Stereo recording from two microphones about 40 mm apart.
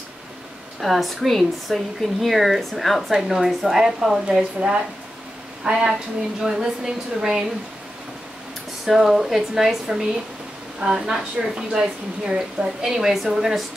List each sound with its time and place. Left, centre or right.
0.7 s a woman's voice: centre
4.6 s a woman's voice: right
8.8 s speech: centre
10.8 s a woman's voice: centre